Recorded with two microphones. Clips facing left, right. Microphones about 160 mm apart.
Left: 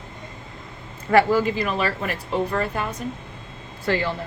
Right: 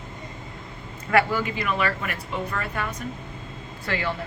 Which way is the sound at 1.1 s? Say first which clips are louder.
Left 5 dB; 35° left (ahead or behind).